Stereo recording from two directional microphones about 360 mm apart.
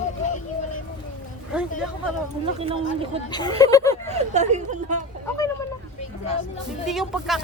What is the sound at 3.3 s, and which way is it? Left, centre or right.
Speech, centre.